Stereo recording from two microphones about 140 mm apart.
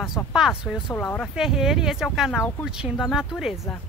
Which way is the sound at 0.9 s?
15° left (ahead or behind).